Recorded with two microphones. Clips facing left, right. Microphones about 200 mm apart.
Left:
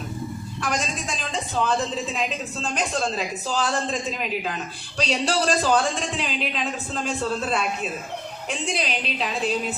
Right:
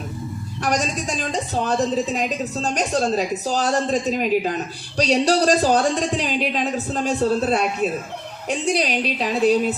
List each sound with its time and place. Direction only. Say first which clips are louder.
0.6 s a woman's voice: right 5 dB; 40° right (ahead or behind)